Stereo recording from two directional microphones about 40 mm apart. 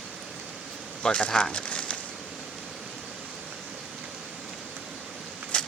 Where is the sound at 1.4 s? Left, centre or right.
Left.